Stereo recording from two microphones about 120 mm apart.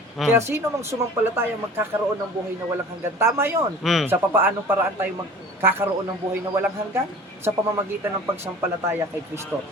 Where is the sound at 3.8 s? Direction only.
Centre (ahead or behind).